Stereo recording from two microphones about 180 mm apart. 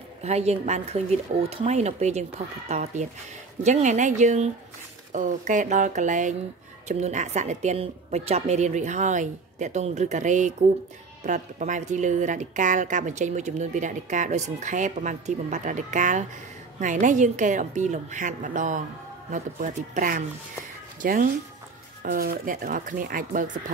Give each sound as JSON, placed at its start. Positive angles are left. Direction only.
{"t": 0.2, "sound": "a woman's voice", "side_deg": -35}